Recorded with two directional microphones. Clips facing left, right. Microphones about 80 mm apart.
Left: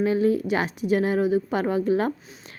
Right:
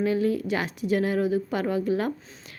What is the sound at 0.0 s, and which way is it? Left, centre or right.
A woman's voice, left.